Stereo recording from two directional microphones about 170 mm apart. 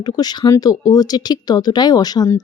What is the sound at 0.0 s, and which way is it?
Speech, 25° left (ahead or behind).